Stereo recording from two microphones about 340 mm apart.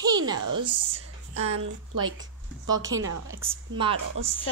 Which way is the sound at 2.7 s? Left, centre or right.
Right.